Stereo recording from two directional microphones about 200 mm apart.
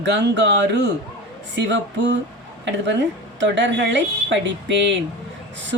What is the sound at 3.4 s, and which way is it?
Speech, 65° right (ahead or behind).